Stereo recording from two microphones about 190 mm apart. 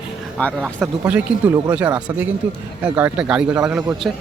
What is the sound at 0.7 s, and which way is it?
Speech, 5° right (ahead or behind).